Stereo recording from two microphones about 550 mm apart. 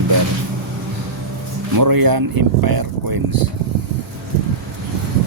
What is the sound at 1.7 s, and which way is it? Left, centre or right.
Speech, right.